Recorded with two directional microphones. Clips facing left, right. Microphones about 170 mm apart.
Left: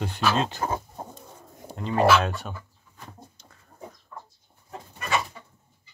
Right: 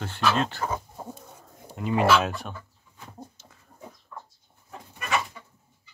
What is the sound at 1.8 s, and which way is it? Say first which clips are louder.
Speech: left 1 dB; 10° right (ahead or behind).